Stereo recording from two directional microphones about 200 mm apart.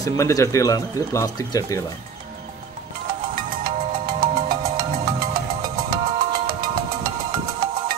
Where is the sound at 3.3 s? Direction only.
45° right (ahead or behind).